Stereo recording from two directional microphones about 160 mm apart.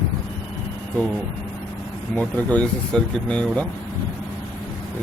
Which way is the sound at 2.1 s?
5° left (ahead or behind).